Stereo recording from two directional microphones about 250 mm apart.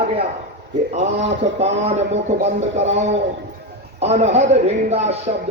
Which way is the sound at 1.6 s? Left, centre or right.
Right.